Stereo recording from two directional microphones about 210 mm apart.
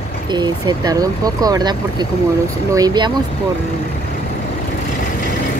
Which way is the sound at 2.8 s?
20° right (ahead or behind).